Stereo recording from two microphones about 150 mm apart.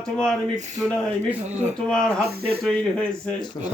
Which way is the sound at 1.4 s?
50° right (ahead or behind).